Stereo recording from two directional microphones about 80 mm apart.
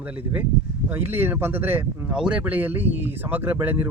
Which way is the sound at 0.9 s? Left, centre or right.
Right.